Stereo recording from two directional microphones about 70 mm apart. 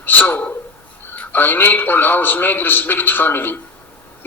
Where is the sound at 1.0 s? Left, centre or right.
Left.